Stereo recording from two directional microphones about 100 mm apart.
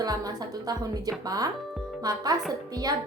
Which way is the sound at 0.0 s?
40° right (ahead or behind).